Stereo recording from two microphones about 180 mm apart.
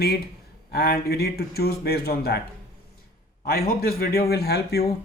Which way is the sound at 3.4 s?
55° left (ahead or behind).